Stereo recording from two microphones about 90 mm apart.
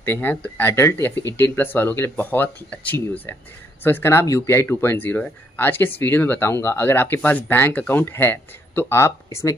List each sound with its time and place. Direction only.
0.0 s speech: 25° left (ahead or behind)